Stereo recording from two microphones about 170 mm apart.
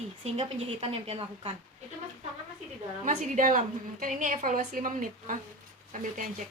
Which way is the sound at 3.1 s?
50° right (ahead or behind).